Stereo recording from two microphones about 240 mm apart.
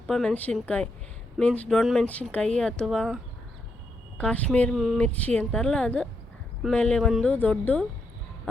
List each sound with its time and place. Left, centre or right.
0.1 s a woman's voice: centre
4.2 s a woman's voice: centre